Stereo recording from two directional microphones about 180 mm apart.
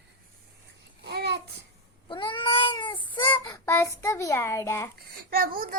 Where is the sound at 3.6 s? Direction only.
15° left (ahead or behind).